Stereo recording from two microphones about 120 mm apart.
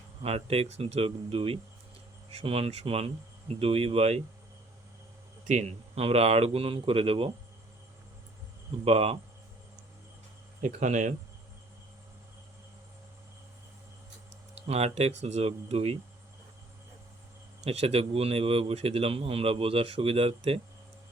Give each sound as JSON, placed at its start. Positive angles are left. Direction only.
{"t": 0.2, "sound": "speech", "side_deg": -55}
{"t": 5.5, "sound": "speech", "side_deg": -65}
{"t": 8.8, "sound": "speech", "side_deg": -55}
{"t": 10.6, "sound": "speech", "side_deg": -85}
{"t": 14.5, "sound": "speech", "side_deg": -60}
{"t": 17.6, "sound": "speech", "side_deg": -55}